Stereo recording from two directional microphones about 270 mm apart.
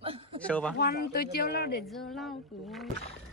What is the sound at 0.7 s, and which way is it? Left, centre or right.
Speech, left.